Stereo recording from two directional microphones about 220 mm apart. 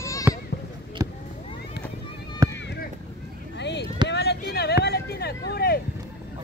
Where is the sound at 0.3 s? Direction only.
10° right (ahead or behind).